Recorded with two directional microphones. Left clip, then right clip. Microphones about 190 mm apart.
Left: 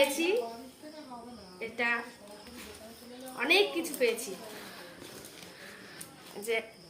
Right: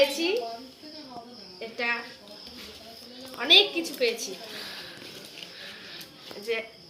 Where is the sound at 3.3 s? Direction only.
10° left (ahead or behind).